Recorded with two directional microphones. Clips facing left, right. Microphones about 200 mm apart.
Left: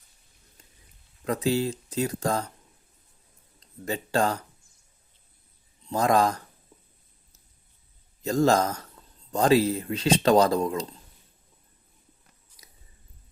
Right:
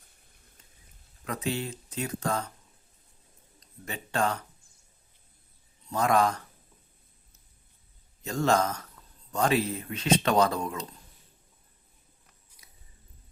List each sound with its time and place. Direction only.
1.2 s speech: 35° left (ahead or behind)
3.6 s speech: 35° left (ahead or behind)
5.9 s speech: 35° left (ahead or behind)
8.2 s speech: 35° left (ahead or behind)